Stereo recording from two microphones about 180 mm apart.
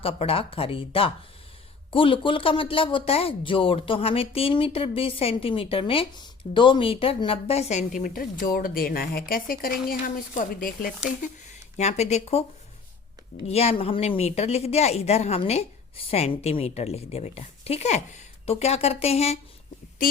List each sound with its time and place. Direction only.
0.0 s speech: 30° left (ahead or behind); by 10.8 s 50° left (ahead or behind)
11.2 s speech: 40° left (ahead or behind)